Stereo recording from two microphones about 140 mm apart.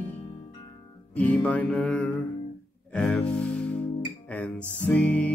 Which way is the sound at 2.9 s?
10° left (ahead or behind).